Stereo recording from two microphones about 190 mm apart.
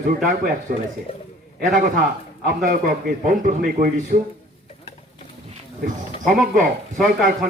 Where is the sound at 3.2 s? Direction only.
45° right (ahead or behind).